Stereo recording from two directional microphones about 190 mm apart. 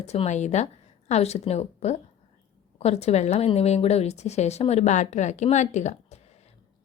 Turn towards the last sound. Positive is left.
turn(degrees=40)  # may be behind; listen again after turning